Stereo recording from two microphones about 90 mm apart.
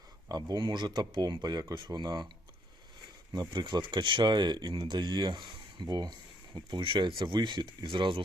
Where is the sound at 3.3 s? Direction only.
55° right (ahead or behind).